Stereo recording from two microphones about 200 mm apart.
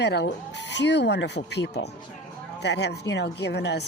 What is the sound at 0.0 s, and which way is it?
Speech, 55° left (ahead or behind).